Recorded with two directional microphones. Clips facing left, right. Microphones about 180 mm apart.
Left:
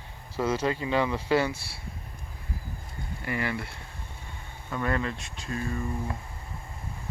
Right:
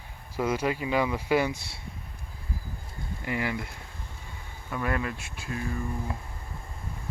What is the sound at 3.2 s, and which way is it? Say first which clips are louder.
Speech: even; 15° right (ahead or behind).